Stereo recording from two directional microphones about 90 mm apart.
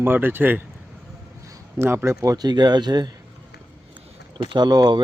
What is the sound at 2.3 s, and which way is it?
Speech, 50° right (ahead or behind).